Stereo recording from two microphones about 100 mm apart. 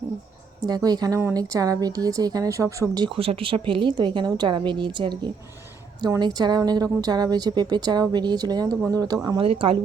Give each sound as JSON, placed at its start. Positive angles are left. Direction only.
{"t": 0.6, "sound": "speech", "side_deg": -40}
{"t": 3.0, "sound": "speech", "side_deg": -65}
{"t": 9.4, "sound": "a woman's voice", "side_deg": -65}